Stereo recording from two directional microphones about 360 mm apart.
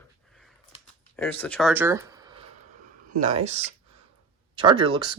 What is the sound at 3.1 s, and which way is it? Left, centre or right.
Speech, centre.